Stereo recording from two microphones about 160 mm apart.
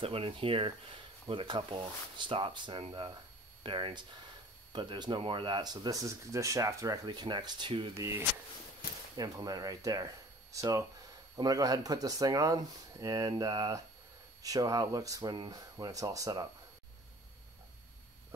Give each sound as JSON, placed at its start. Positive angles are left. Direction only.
{"t": 0.0, "sound": "speech", "side_deg": -35}
{"t": 9.1, "sound": "speech", "side_deg": -25}